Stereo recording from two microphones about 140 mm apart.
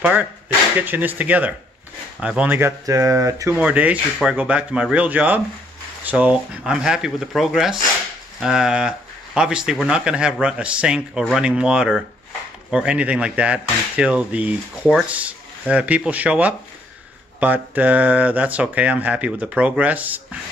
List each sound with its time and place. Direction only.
0.0 s speech: 10° right (ahead or behind)
3.5 s speech: 10° right (ahead or behind)